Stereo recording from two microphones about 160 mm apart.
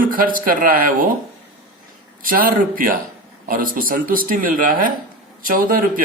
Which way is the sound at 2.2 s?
60° right (ahead or behind).